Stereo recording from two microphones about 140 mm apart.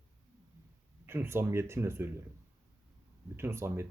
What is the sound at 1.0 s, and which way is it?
Speech, 15° right (ahead or behind).